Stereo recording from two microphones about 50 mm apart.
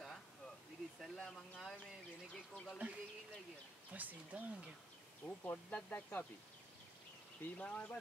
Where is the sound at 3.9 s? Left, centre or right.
Right.